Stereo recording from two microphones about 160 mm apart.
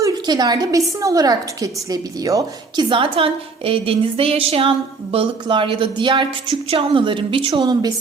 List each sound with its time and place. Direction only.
0.0 s a woman's voice: 25° right (ahead or behind)
2.9 s a woman's voice: 35° right (ahead or behind)